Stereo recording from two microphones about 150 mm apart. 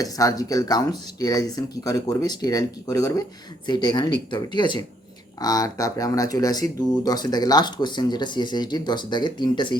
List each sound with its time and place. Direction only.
0.0 s speech: 25° left (ahead or behind)